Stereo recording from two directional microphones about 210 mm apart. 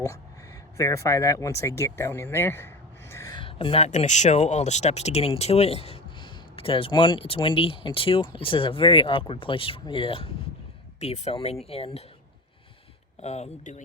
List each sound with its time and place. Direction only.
0.8 s speech: 15° left (ahead or behind)
13.1 s speech: 30° left (ahead or behind)